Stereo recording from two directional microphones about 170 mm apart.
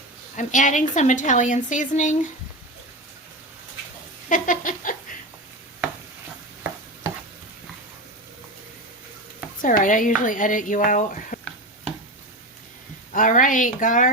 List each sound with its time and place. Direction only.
0.3 s a woman's voice: 45° left (ahead or behind)
4.3 s a sound: 50° left (ahead or behind)
9.6 s a woman's voice: 55° left (ahead or behind)
13.1 s a woman's voice: 50° left (ahead or behind)